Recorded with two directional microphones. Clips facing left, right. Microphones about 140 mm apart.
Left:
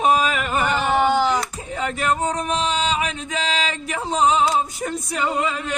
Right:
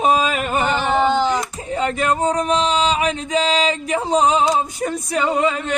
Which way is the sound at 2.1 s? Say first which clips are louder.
Right 3 dB; 35° right (ahead or behind).